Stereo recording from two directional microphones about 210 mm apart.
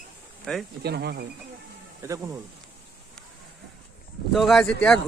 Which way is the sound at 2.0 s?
15° right (ahead or behind).